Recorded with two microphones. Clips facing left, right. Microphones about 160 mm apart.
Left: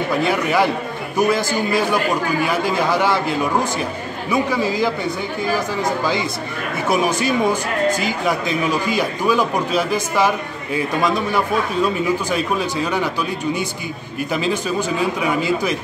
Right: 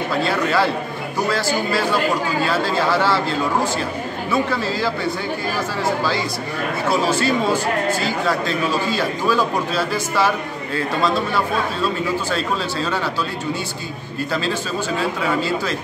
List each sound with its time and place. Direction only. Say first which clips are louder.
0.1 s speech: left 1 dB; 15° left (ahead or behind)
14.3 s speech: left 3 dB; 15° left (ahead or behind)